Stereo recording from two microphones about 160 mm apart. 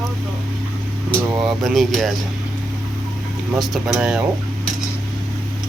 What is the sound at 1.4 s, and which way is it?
Speech, centre (ahead or behind).